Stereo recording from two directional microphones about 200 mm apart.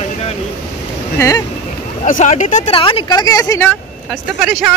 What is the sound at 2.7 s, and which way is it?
Speech, 25° left (ahead or behind).